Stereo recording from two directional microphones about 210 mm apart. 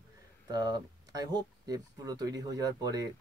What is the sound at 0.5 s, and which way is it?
Speech, 20° right (ahead or behind).